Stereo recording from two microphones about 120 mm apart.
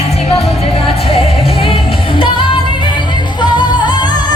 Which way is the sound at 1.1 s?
55° left (ahead or behind).